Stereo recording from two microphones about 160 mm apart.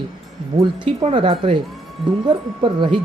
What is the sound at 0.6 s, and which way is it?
Speech, 30° right (ahead or behind).